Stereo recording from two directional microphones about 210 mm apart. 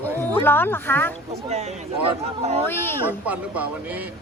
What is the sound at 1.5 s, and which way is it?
Speech, 30° right (ahead or behind).